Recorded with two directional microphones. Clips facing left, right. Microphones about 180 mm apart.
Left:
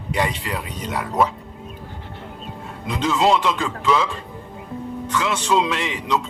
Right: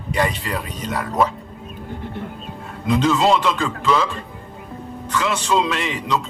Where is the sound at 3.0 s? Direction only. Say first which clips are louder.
Even; 15° left (ahead or behind).